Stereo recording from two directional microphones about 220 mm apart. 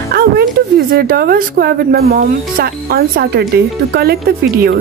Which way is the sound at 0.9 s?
45° right (ahead or behind).